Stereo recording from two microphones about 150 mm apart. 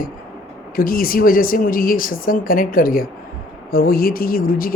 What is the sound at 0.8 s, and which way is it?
A woman's voice, 75° left (ahead or behind).